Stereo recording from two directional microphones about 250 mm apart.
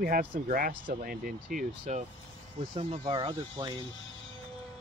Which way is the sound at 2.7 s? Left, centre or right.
Centre.